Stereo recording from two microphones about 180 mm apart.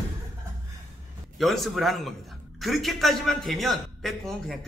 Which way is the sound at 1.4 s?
Centre (ahead or behind).